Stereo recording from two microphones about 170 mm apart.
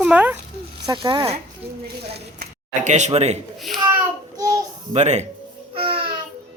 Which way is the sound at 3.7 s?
Centre (ahead or behind).